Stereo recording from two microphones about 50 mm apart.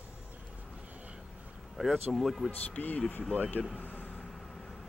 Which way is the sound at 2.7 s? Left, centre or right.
Left.